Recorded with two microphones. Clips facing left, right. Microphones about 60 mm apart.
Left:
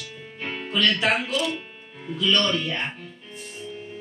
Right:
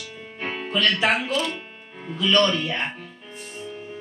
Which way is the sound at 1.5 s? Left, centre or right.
Centre.